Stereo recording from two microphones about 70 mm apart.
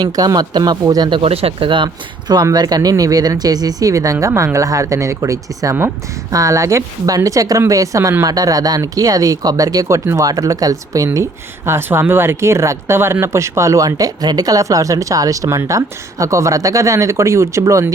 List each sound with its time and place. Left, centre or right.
0.0 s speech: right
2.2 s speech: right
2.9 s speech: right
11.6 s speech: right